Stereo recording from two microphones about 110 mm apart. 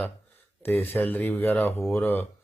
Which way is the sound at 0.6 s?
20° left (ahead or behind).